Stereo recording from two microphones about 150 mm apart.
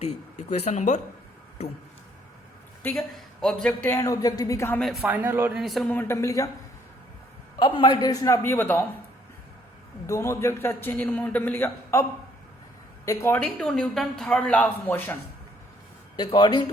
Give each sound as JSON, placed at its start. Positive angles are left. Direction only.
{"t": 0.0, "sound": "speech", "side_deg": 50}
{"t": 3.4, "sound": "speech", "side_deg": 5}
{"t": 3.9, "sound": "a man's voice", "side_deg": 20}
{"t": 4.8, "sound": "speech", "side_deg": 0}
{"t": 5.0, "sound": "a man's voice", "side_deg": -15}
{"t": 5.5, "sound": "speech", "side_deg": 0}
{"t": 5.9, "sound": "a man's voice", "side_deg": 15}
{"t": 7.6, "sound": "a man's voice", "side_deg": 30}
{"t": 10.1, "sound": "a man's voice", "side_deg": 20}
{"t": 13.1, "sound": "speech", "side_deg": 15}
{"t": 16.1, "sound": "a man's voice", "side_deg": 30}